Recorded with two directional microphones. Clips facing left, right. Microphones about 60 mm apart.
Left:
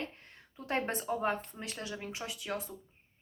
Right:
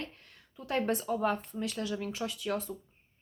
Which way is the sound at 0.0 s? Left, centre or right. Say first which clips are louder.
Left 1 dB; left.